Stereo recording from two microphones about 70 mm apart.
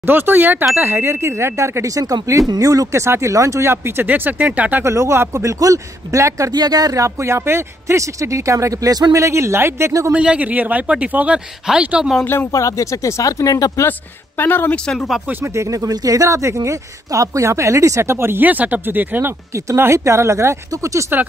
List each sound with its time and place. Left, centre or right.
0.0 s speech: right
2.4 s speech: right
3.7 s speech: right
4.8 s speech: right
6.5 s speech: right
9.2 s speech: right
10.1 s speech: centre
12.5 s speech: left
14.4 s speech: left
15.4 s speech: right
19.5 s speech: right